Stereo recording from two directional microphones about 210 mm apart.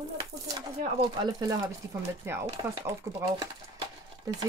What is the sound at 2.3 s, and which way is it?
Speech, 10° right (ahead or behind).